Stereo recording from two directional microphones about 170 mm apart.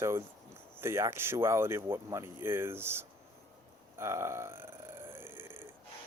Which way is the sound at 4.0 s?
15° right (ahead or behind).